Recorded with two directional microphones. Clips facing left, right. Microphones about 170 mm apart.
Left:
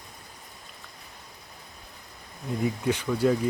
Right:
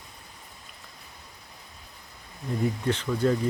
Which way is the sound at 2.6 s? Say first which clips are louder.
Even; 10° left (ahead or behind).